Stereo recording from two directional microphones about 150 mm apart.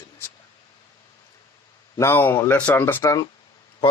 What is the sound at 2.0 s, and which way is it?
Speech, 15° left (ahead or behind).